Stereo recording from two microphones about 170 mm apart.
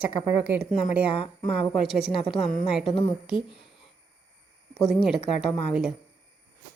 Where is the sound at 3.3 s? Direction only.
30° left (ahead or behind).